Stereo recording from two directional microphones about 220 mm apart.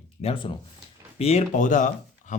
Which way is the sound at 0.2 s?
25° left (ahead or behind).